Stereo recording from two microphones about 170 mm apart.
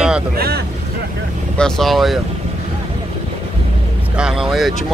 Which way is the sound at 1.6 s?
5° left (ahead or behind).